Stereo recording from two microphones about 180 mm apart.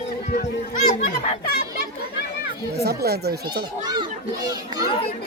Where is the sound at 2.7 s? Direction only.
60° right (ahead or behind).